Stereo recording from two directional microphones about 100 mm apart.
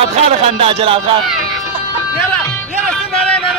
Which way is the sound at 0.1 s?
80° right.